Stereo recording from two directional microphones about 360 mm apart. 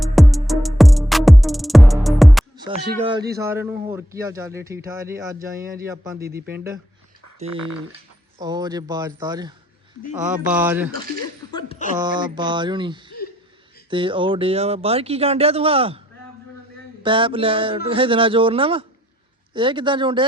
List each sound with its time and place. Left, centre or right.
0.0 s music: centre
2.9 s speech: centre
5.5 s speech: right
5.8 s speech: centre
8.4 s speech: centre
11.5 s a sound: centre
11.9 s speech: centre
17.0 s speech: centre